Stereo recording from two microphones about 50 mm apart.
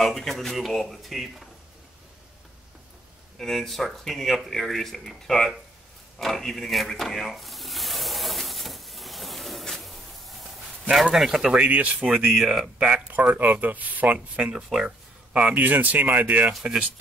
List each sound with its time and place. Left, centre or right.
0.0 s speech: centre
3.3 s speech: centre
6.1 s a sound: centre
11.1 s speech: centre
11.5 s speech: right
12.3 s speech: centre
12.7 s speech: right
14.5 s speech: centre
15.3 s speech: right